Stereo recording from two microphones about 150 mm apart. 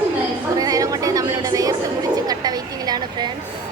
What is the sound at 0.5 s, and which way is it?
Chatter, 25° right (ahead or behind).